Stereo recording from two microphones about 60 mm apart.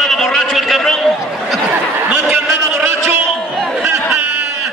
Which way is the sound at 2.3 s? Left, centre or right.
Right.